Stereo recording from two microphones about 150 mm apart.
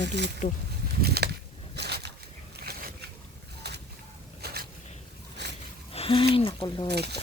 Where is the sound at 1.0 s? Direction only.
90° right.